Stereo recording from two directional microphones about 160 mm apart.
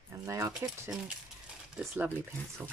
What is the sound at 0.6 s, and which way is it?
Speech, 15° right (ahead or behind).